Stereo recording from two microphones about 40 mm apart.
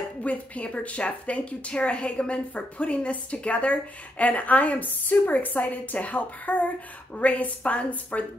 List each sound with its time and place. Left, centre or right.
0.2 s speech: left